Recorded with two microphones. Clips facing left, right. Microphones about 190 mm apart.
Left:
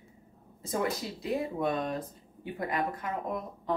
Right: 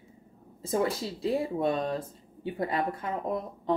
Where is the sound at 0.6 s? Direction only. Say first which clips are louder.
Right 3 dB; 30° right (ahead or behind).